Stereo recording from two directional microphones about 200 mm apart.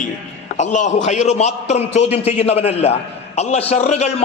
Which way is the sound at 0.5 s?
35° left (ahead or behind).